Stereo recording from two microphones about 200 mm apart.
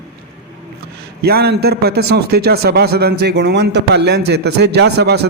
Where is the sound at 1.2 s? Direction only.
50° right (ahead or behind).